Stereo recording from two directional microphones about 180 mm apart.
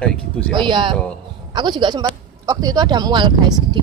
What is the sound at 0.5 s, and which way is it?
Speech, 25° right (ahead or behind).